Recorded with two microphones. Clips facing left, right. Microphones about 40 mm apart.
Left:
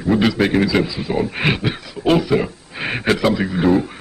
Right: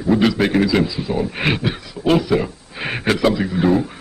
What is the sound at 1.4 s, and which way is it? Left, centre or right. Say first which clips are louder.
A man's voice: left 1 dB; centre.